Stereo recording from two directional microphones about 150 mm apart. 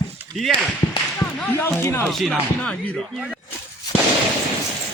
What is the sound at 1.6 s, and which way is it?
Speech, 15° left (ahead or behind).